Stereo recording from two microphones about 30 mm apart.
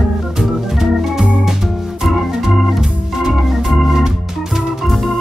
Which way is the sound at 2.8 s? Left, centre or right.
Centre.